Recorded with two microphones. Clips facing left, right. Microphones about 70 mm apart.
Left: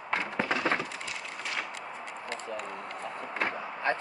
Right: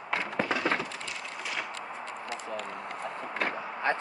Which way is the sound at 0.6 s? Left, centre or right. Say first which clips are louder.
Even; centre.